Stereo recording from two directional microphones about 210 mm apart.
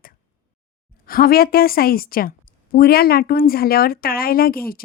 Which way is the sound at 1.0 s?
45° left (ahead or behind).